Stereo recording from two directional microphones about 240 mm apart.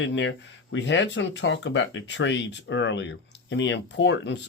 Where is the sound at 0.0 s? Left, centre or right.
Left.